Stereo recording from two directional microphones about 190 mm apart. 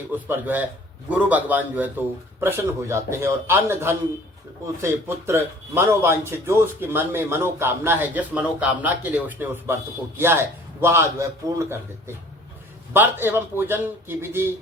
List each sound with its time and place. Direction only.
0.1 s a man's voice: 10° right (ahead or behind)